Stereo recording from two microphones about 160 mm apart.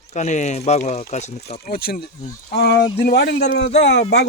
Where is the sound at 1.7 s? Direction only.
70° left (ahead or behind).